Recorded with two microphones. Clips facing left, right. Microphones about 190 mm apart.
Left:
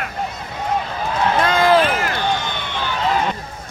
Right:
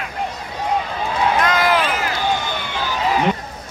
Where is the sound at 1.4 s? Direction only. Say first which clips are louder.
Left 7 dB; 30° left (ahead or behind).